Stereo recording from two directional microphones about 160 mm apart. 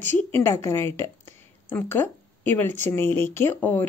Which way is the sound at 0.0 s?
15° left (ahead or behind).